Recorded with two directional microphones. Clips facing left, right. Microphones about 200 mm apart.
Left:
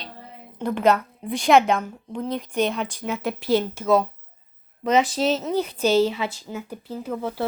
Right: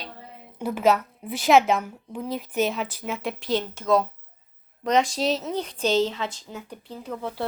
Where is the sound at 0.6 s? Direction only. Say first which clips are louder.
Left 1 dB; 5° right (ahead or behind).